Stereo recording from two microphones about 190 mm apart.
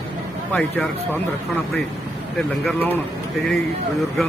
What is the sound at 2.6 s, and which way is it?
Speech, 10° left (ahead or behind).